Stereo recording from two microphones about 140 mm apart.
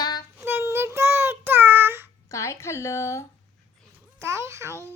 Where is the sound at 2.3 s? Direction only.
20° left (ahead or behind).